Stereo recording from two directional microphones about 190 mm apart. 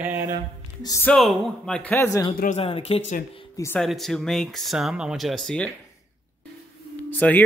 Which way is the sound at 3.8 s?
Centre (ahead or behind).